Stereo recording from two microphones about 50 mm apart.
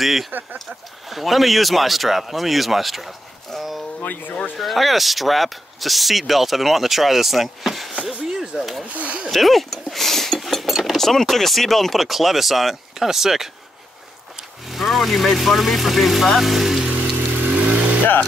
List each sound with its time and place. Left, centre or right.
0.0 s speech: centre
0.3 s speech: right
1.1 s speech: centre
4.0 s speech: left
4.6 s speech: centre
8.3 s a sound: centre
8.8 s speech: right
9.3 s speech: centre
14.7 s speech: centre
17.5 s vehicle: right